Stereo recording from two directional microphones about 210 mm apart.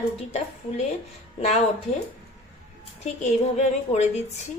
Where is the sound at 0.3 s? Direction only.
30° left (ahead or behind).